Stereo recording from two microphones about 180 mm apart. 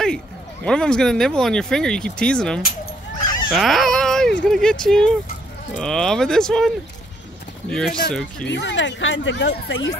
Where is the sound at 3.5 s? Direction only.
Centre (ahead or behind).